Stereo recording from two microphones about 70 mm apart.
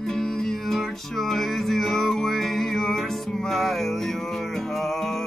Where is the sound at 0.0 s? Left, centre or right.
Centre.